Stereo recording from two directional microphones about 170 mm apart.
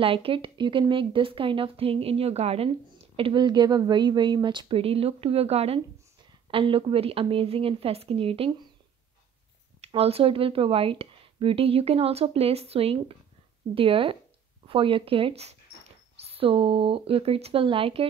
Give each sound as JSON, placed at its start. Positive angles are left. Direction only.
{"t": 0.0, "sound": "speech", "side_deg": -35}
{"t": 9.8, "sound": "speech", "side_deg": -35}